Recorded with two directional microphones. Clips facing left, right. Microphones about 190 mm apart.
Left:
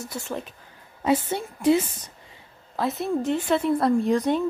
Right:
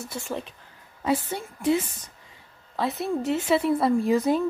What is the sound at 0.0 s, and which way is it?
Speech, centre (ahead or behind).